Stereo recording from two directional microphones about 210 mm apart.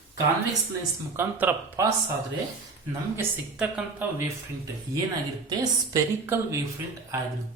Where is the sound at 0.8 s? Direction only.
15° right (ahead or behind).